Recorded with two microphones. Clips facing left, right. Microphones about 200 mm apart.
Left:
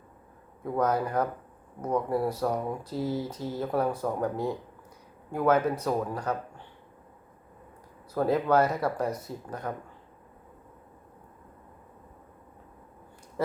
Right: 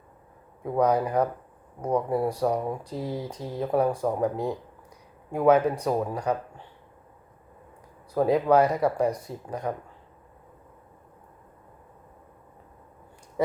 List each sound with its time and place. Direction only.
0.6 s speech: 10° right (ahead or behind)
3.0 s speech: 35° right (ahead or behind)
3.5 s speech: 15° right (ahead or behind)
5.3 s speech: 10° right (ahead or behind)
8.1 s speech: 10° right (ahead or behind)